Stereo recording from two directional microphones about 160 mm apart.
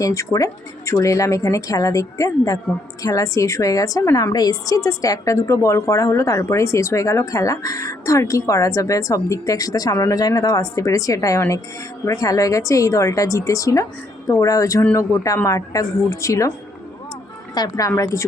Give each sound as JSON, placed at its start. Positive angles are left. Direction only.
{"t": 0.0, "sound": "a woman's voice", "side_deg": 20}
{"t": 17.5, "sound": "a woman's voice", "side_deg": 25}